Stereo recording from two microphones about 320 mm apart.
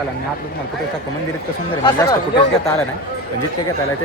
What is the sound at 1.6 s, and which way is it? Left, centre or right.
Speech, centre.